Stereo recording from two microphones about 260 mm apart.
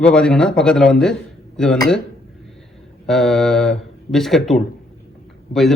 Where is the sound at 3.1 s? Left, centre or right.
Centre.